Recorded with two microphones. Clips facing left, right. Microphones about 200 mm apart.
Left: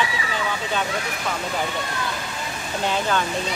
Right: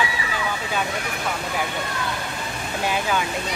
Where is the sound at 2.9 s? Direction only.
10° right (ahead or behind).